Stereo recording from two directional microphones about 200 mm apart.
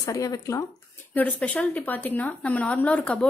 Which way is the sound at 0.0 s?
15° left (ahead or behind).